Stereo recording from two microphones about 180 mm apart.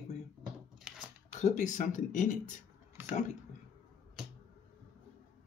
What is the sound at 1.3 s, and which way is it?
Speech, 40° left (ahead or behind).